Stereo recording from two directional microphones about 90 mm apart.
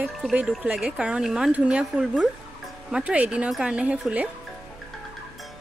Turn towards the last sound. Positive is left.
turn(degrees=-15)  # may be behind; listen again after turning